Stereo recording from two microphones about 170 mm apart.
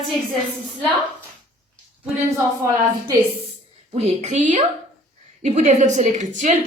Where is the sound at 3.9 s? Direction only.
40° right (ahead or behind).